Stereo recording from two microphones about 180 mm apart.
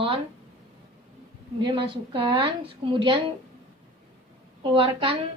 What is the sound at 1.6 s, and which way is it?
A woman's voice, 30° right (ahead or behind).